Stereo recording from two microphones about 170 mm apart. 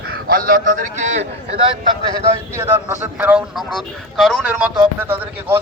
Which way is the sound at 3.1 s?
10° right (ahead or behind).